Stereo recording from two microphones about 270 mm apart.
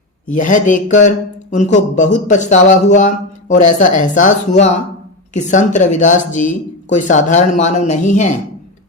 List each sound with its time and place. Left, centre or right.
0.3 s speech: left